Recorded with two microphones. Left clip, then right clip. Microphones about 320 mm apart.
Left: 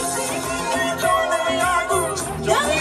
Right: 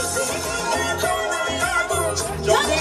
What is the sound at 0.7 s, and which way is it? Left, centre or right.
Music, centre.